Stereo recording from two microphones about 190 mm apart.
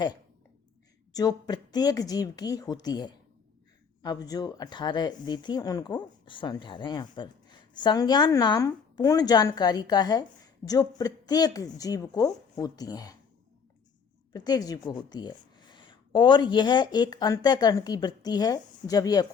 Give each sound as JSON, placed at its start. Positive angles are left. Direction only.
{"t": 1.1, "sound": "speech", "side_deg": 20}
{"t": 14.3, "sound": "speech", "side_deg": 20}